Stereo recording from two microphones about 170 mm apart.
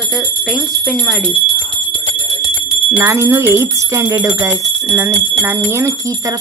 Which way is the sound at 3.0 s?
15° right (ahead or behind).